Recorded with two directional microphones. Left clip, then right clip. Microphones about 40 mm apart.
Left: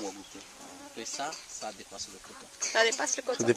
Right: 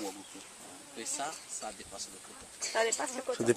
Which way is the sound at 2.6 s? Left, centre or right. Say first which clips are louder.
Left 5 dB; left.